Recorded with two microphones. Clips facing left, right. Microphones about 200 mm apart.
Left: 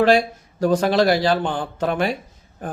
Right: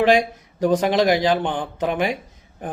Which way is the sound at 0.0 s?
15° right (ahead or behind).